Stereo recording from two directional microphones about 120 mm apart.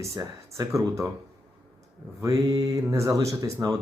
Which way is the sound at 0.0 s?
25° right (ahead or behind).